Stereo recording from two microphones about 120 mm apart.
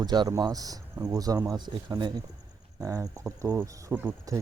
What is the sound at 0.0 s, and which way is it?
Speech, 35° right (ahead or behind).